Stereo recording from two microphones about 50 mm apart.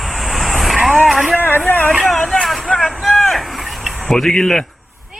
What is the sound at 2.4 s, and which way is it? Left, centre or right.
Vehicle, centre.